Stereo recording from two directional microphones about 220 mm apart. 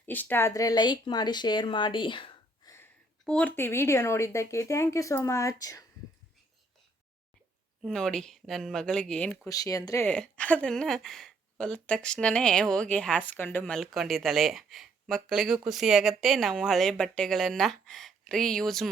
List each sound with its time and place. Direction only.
0.0 s speech: 10° left (ahead or behind)
2.7 s speech: 5° left (ahead or behind)
7.8 s speech: centre (ahead or behind)